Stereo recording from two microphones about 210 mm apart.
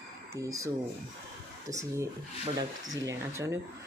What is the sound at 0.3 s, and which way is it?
Speech, 15° right (ahead or behind).